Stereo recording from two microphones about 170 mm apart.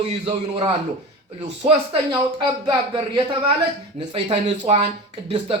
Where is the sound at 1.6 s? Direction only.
30° right (ahead or behind).